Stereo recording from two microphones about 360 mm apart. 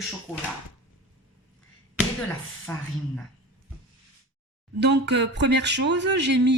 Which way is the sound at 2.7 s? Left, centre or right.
Centre.